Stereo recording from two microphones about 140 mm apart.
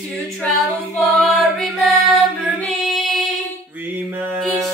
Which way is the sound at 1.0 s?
Centre (ahead or behind).